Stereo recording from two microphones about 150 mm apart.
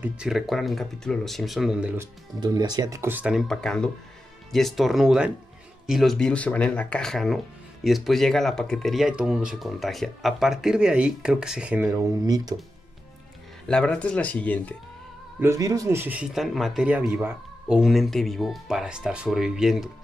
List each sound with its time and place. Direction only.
0.0 s speech: 5° right (ahead or behind)
2.4 s speech: 25° right (ahead or behind); by 12.0 s 10° right (ahead or behind)
12.0 s speech: 25° right (ahead or behind)
13.7 s speech: 5° left (ahead or behind)
15.4 s speech: 20° right (ahead or behind); by 19.9 s 5° right (ahead or behind)